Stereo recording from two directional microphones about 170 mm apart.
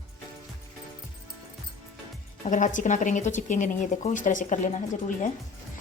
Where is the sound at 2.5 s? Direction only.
50° left (ahead or behind).